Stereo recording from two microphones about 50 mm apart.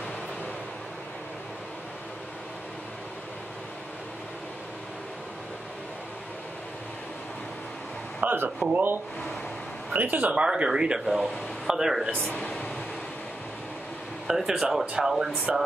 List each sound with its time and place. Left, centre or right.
8.2 s a sound: right
8.7 s speech: right
10.4 s speech: centre
12.4 s speech: left
14.2 s speech: centre